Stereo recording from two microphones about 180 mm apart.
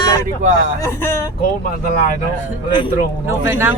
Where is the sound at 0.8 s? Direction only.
15° left (ahead or behind).